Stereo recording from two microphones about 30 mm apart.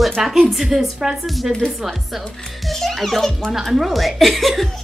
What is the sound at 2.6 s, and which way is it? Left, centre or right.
A child's voice, centre.